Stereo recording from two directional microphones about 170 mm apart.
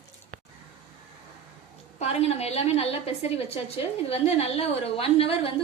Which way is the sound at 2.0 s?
40° left (ahead or behind).